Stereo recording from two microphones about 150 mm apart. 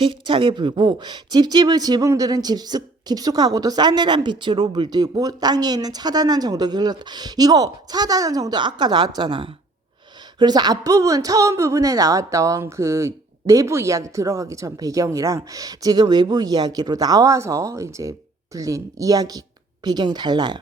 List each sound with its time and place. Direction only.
0.0 s speech: 35° right (ahead or behind)